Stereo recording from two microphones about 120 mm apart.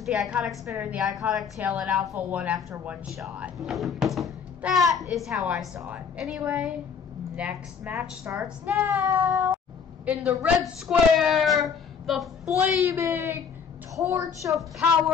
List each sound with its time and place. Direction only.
0.0 s a woman's voice: 5° right (ahead or behind)
8.8 s child singing: 20° right (ahead or behind)
10.0 s a woman's voice: 10° right (ahead or behind)
12.9 s child singing: 20° right (ahead or behind)